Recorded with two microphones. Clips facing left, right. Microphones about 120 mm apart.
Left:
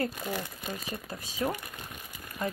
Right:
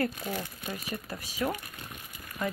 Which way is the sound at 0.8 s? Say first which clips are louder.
Right 1 dB; 25° left (ahead or behind).